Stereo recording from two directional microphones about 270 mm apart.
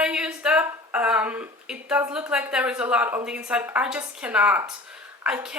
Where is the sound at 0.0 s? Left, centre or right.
Centre.